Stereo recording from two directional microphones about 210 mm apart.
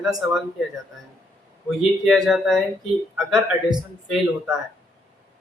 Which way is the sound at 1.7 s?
Centre (ahead or behind).